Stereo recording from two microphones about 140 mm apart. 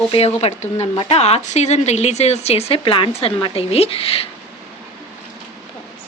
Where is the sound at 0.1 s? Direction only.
45° left (ahead or behind).